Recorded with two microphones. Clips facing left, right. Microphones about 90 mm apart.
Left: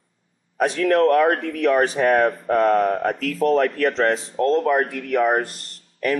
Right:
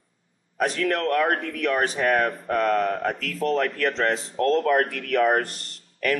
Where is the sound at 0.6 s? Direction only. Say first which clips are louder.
Left 6 dB; centre (ahead or behind).